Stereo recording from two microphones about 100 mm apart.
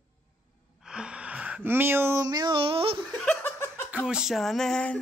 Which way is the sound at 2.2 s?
45° right (ahead or behind).